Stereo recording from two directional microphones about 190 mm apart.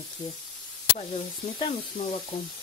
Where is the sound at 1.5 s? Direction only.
25° left (ahead or behind).